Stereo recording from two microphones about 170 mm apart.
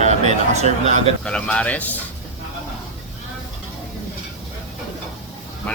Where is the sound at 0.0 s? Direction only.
40° right (ahead or behind).